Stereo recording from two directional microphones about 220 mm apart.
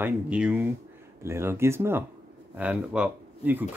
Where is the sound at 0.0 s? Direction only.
5° right (ahead or behind).